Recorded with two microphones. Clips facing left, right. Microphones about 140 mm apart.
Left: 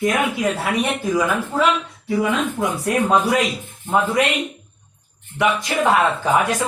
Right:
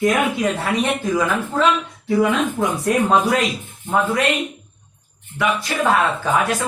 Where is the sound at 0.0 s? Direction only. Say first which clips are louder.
Right 1 dB; 10° left (ahead or behind).